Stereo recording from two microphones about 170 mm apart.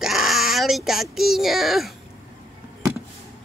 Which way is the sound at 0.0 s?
Centre (ahead or behind).